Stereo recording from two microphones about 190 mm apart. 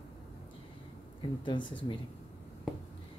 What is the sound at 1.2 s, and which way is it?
Speech, 25° left (ahead or behind).